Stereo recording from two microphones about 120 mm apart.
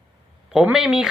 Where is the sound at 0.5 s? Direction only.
5° right (ahead or behind).